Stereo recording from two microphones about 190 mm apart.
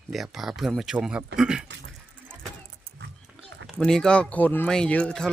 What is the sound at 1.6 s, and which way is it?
Speech, 70° right (ahead or behind).